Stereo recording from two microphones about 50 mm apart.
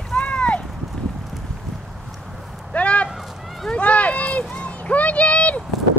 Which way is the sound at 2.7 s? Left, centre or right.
Left.